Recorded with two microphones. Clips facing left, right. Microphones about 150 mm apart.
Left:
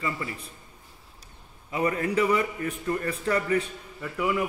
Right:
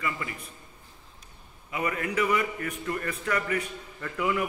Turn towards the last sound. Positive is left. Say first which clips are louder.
# left 1 dB
turn(degrees=10)  # may be behind; listen again after turning